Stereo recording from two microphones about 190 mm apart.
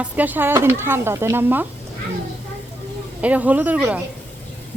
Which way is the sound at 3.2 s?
5° right (ahead or behind).